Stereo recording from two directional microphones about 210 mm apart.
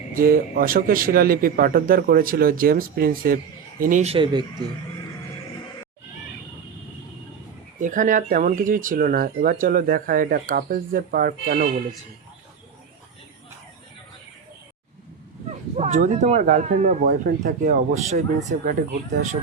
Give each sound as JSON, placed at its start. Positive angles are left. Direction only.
{"t": 0.2, "sound": "a man's voice", "side_deg": -40}
{"t": 7.8, "sound": "speech", "side_deg": -40}
{"t": 15.8, "sound": "speech", "side_deg": -35}